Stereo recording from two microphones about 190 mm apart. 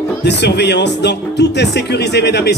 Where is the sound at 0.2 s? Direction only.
60° left (ahead or behind).